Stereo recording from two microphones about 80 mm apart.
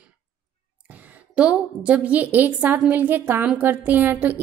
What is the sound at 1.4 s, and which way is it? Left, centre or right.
A woman's voice, centre.